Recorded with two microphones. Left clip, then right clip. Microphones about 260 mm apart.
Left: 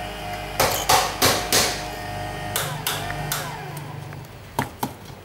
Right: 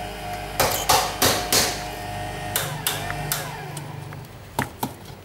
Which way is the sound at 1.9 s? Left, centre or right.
Centre.